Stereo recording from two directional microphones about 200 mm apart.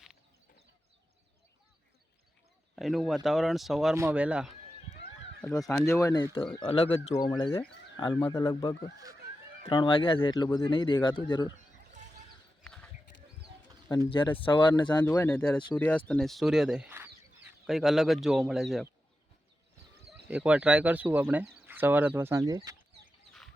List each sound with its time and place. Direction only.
2.7 s speech: centre (ahead or behind)
5.7 s speech: 15° left (ahead or behind)
12.6 s a sound: 5° left (ahead or behind)
14.1 s speech: 25° left (ahead or behind)
15.0 s speech: 10° left (ahead or behind)
20.1 s speech: 5° right (ahead or behind)